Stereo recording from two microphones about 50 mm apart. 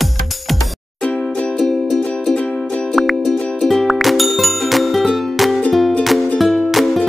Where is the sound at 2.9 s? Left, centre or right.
Centre.